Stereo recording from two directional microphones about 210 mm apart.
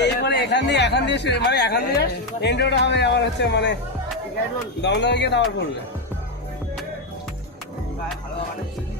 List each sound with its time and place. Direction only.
0.0 s speech: 55° left (ahead or behind)
4.8 s speech: 55° left (ahead or behind)